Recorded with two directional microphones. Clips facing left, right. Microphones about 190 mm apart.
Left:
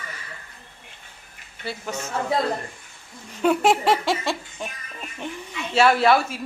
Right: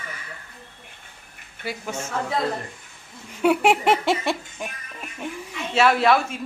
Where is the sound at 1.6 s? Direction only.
10° right (ahead or behind).